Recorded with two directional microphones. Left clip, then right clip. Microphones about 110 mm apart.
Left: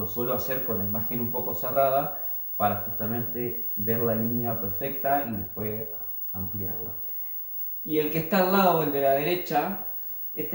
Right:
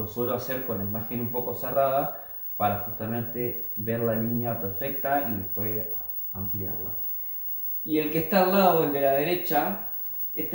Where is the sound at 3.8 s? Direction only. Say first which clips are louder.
Even; 20° left (ahead or behind).